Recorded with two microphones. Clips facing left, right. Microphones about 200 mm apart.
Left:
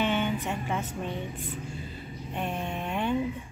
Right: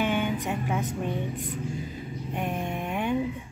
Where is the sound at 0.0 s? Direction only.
15° right (ahead or behind).